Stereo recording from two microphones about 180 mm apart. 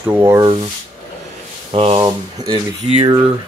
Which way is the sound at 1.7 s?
35° right (ahead or behind).